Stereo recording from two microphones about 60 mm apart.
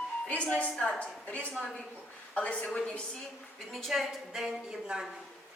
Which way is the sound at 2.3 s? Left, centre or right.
Left.